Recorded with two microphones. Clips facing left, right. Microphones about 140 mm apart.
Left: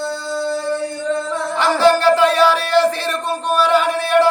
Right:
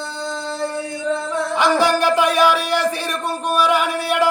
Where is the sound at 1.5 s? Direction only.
15° right (ahead or behind).